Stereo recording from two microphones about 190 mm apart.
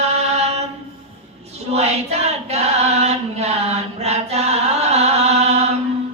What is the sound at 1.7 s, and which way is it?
Child singing, 35° right (ahead or behind).